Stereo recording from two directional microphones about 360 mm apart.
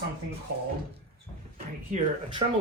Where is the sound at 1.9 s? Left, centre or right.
Centre.